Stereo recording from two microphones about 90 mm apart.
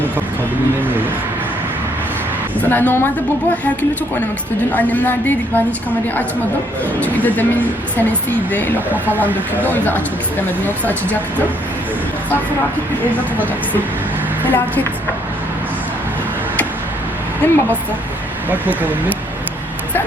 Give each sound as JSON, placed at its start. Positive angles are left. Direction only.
{"t": 2.6, "sound": "a woman's voice", "side_deg": 20}
{"t": 4.7, "sound": "a woman's voice", "side_deg": 20}
{"t": 7.0, "sound": "a woman's voice", "side_deg": 20}
{"t": 17.4, "sound": "a woman's voice", "side_deg": 20}
{"t": 18.5, "sound": "speech", "side_deg": -20}